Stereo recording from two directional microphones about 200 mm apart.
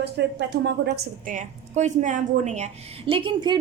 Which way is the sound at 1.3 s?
35° right (ahead or behind).